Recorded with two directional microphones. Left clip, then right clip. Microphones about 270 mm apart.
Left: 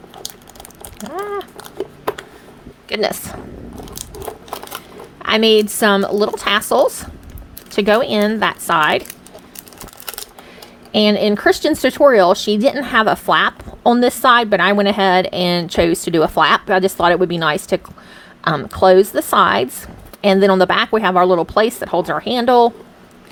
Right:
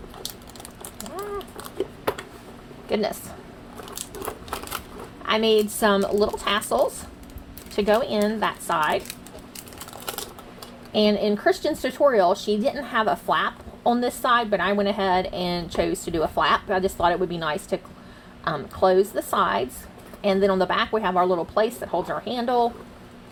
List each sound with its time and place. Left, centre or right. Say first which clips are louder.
1.8 s a sound: left 4 dB; centre
2.9 s speech: left 6 dB; left
5.2 s speech: left 7 dB; left
10.9 s speech: left 7 dB; left